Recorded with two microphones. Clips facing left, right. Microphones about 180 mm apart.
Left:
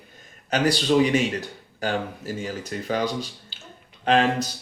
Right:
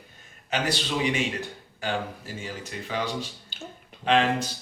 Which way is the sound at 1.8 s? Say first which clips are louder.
Left 4 dB; 40° left (ahead or behind).